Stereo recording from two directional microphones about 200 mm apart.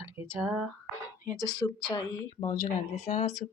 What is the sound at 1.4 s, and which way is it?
Speech, 15° left (ahead or behind).